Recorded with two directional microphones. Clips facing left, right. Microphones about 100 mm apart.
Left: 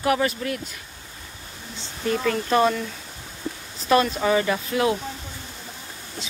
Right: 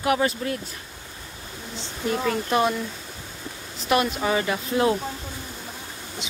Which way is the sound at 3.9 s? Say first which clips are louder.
Left 3 dB; 15° right (ahead or behind).